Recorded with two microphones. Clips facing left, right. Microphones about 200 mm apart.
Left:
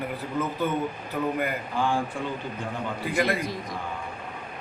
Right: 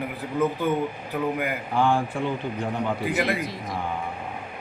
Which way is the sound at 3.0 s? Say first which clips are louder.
Left 4 dB; 5° right (ahead or behind).